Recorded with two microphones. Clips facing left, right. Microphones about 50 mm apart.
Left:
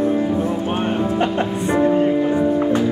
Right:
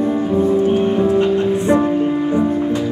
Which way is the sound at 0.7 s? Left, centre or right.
Left.